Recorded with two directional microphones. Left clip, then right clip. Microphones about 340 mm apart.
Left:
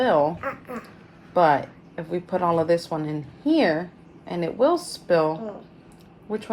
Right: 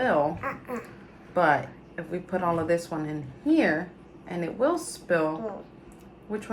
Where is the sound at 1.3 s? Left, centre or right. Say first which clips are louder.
Left 4 dB; centre.